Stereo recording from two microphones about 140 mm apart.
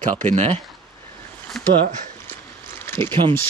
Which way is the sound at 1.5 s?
Centre (ahead or behind).